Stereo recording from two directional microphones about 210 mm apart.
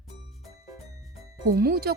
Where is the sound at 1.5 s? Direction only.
45° right (ahead or behind).